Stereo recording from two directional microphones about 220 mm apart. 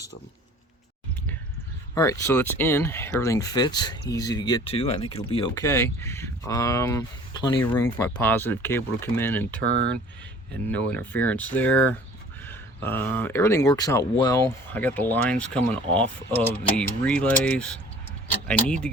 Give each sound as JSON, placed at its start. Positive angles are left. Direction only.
{"t": 2.0, "sound": "speech", "side_deg": 15}
{"t": 5.6, "sound": "speech", "side_deg": 10}
{"t": 10.7, "sound": "speech", "side_deg": 5}